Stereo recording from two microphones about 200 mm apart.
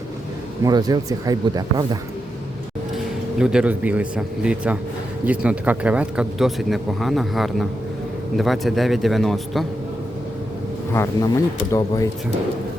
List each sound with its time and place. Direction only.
0.6 s speech: 20° right (ahead or behind)
2.9 s speech: 5° right (ahead or behind)
10.9 s speech: 15° left (ahead or behind)